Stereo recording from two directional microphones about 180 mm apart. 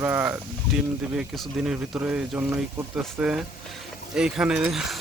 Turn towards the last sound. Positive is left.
turn(degrees=0)  # may be behind; listen again after turning